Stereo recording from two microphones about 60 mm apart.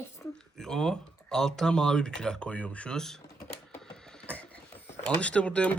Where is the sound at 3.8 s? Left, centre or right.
Centre.